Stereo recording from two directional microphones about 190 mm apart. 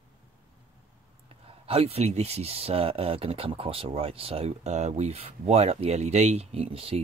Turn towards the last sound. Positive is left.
turn(degrees=-30)  # may be behind; listen again after turning